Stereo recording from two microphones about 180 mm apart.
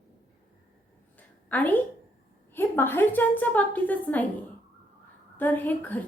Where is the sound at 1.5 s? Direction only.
10° left (ahead or behind).